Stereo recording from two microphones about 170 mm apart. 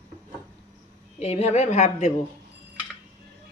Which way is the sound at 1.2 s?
40° left (ahead or behind).